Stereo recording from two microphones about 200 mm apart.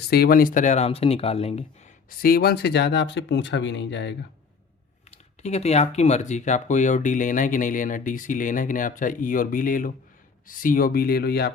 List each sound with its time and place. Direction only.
0.1 s speech: 50° left (ahead or behind); by 1.6 s 30° left (ahead or behind)
2.0 s speech: 50° left (ahead or behind)
5.1 s speech: 35° left (ahead or behind); by 11.5 s 55° left (ahead or behind)